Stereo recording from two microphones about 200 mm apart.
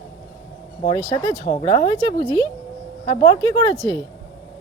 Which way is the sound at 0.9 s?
15° left (ahead or behind).